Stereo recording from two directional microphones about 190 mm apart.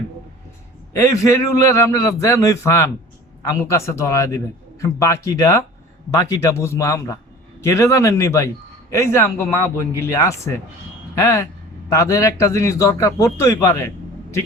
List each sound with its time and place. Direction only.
0.9 s a man's voice: 15° left (ahead or behind)